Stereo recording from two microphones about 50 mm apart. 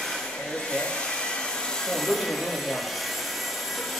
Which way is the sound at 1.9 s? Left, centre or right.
Centre.